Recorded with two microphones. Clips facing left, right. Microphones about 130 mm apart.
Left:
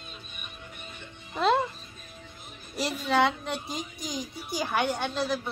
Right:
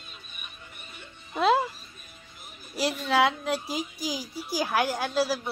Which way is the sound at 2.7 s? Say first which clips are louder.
Right 1 dB; centre (ahead or behind).